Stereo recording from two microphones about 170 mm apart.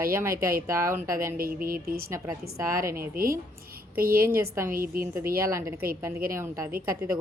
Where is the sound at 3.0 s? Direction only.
60° right (ahead or behind).